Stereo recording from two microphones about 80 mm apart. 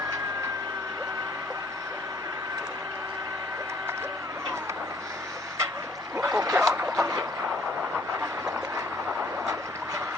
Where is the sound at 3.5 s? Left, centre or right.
Right.